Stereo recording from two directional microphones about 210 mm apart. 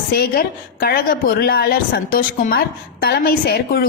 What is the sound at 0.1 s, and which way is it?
A woman's voice, 45° left (ahead or behind).